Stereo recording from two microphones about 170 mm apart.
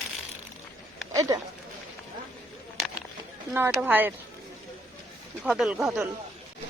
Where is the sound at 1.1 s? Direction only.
20° right (ahead or behind).